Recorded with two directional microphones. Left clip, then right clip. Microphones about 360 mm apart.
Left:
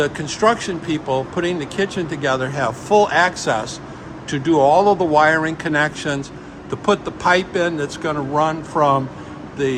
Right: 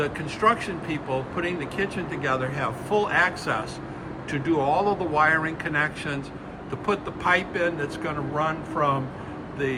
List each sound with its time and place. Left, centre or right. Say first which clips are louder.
0.0 s speech: left 6 dB; centre